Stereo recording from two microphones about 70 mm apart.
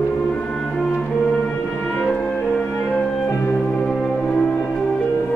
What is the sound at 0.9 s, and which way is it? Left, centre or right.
Music, centre.